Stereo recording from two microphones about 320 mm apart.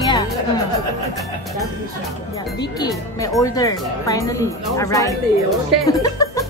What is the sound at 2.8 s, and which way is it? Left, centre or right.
Speech, centre.